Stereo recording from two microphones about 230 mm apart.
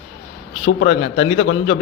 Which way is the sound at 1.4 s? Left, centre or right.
Left.